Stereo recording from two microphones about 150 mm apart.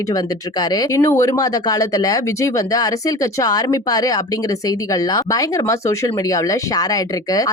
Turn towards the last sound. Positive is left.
turn(degrees=25)  # may be behind; listen again after turning